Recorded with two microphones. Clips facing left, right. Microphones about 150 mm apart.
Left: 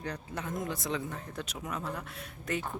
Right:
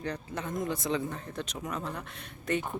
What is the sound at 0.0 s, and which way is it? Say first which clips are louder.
Speech: right 2 dB; 5° left (ahead or behind).